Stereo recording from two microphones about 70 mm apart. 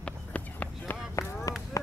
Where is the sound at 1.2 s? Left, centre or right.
Left.